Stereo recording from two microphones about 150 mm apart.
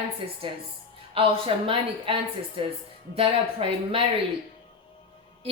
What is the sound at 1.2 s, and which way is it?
A woman's voice, 40° right (ahead or behind).